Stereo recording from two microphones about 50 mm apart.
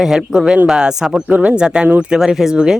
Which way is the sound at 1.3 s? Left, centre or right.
Right.